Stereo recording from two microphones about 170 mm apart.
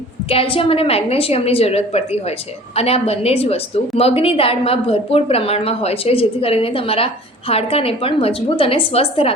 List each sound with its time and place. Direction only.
0.3 s a woman's voice: 35° left (ahead or behind)